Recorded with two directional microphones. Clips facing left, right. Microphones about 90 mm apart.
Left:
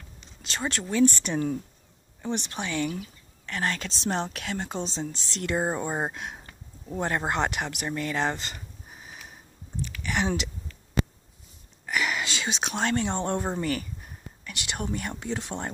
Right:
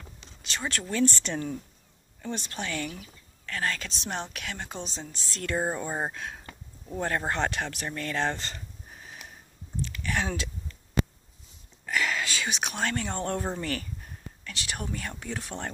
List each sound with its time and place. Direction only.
0.4 s speech: 30° left (ahead or behind)
0.8 s a woman's voice: 15° left (ahead or behind)
9.8 s a sound: 15° left (ahead or behind)
11.8 s speech: 15° left (ahead or behind)